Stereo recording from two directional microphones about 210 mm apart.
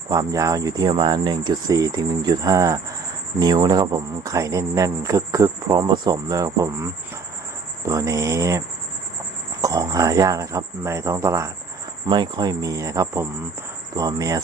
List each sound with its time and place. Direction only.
0.1 s a man's voice: 15° right (ahead or behind)